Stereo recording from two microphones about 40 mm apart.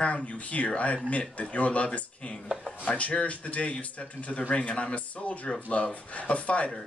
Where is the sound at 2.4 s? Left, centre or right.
Centre.